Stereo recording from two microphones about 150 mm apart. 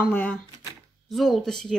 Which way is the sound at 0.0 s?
10° left (ahead or behind).